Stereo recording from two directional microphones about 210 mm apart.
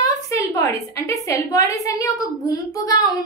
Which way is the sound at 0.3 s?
15° left (ahead or behind).